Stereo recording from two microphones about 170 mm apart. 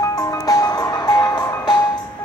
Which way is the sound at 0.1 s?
20° left (ahead or behind).